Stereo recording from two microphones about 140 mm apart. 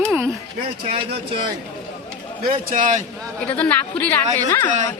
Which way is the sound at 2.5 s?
75° right (ahead or behind).